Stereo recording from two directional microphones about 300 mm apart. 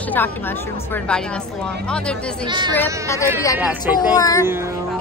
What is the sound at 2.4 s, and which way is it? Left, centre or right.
A woman's voice, centre.